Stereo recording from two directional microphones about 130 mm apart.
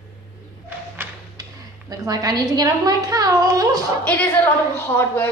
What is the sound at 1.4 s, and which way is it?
A woman's voice, 30° right (ahead or behind).